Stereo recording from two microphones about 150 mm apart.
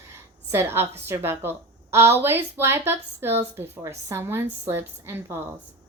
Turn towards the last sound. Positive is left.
turn(degrees=-15)  # may be behind; listen again after turning